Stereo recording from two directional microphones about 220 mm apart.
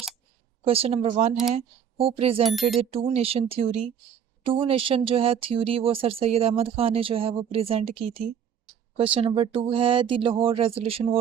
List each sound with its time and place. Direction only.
0.6 s speech: 25° right (ahead or behind)
2.5 s speech: centre (ahead or behind)
2.7 s speech: 25° right (ahead or behind)